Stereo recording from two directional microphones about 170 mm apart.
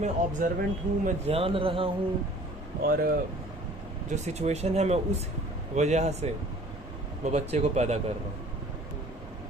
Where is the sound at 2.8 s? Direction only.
60° right (ahead or behind).